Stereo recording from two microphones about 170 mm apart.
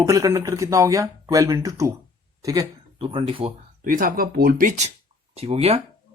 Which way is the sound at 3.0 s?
30° right (ahead or behind).